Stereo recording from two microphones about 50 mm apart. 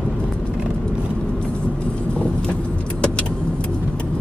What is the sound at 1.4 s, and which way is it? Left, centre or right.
Vehicle, left.